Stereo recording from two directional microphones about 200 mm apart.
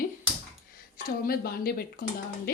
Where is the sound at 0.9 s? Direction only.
50° left (ahead or behind).